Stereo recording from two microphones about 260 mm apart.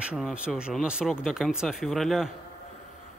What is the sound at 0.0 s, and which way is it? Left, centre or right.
Speech, centre.